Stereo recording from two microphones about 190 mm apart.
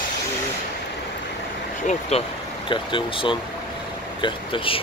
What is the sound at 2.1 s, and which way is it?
Speech, 35° left (ahead or behind).